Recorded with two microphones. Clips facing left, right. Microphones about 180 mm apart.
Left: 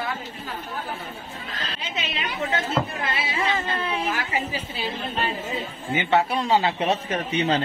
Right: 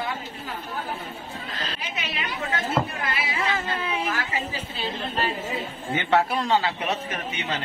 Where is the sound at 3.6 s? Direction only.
10° right (ahead or behind).